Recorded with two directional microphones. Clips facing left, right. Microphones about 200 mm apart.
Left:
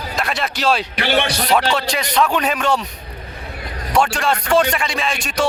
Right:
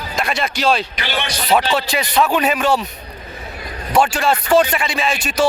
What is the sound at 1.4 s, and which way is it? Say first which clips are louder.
Speech: right 1 dB; 5° right (ahead or behind).